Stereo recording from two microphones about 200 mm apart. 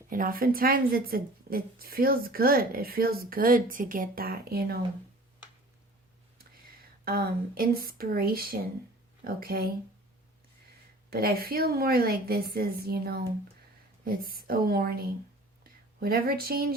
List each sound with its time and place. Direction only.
0.1 s speech: 45° right (ahead or behind)
7.0 s speech: 50° right (ahead or behind)
11.1 s speech: 50° right (ahead or behind)